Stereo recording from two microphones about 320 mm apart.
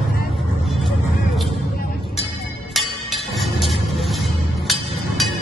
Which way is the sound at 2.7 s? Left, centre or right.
Centre.